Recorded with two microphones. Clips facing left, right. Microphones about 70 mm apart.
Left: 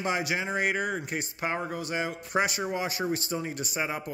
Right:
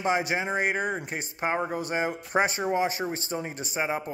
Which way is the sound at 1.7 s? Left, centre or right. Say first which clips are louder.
Right 3 dB; right.